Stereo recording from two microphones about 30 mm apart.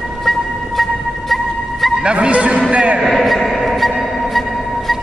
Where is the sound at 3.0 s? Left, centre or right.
Centre.